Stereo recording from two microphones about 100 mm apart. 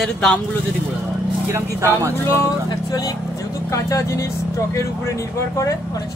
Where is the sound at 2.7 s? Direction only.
40° left (ahead or behind).